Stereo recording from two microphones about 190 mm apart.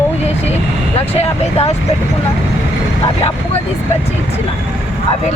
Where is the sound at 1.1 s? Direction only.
35° left (ahead or behind).